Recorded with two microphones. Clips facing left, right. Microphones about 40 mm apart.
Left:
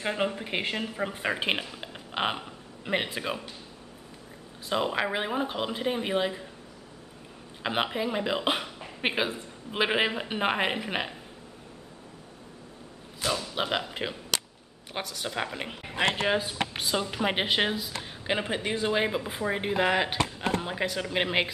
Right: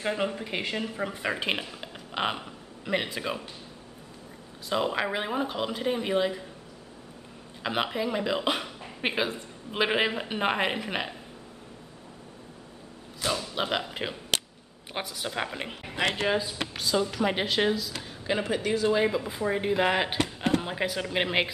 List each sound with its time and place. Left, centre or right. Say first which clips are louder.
0.0 s speech: even; centre
0.8 s speech: even; centre
1.7 s a sound: even; centre
2.8 s speech: even; centre
3.2 s speech: even; centre
4.6 s speech: even; centre
7.6 s speech: even; centre
13.2 s speech: even; centre
16.7 s speech: right 6 dB; left
19.8 s speech: left 3 dB; centre